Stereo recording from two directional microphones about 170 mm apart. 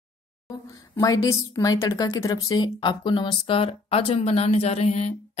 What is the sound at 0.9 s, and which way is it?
A woman's voice, 20° left (ahead or behind).